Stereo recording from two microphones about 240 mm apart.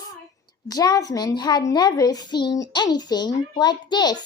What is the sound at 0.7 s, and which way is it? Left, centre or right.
A child's voice, centre.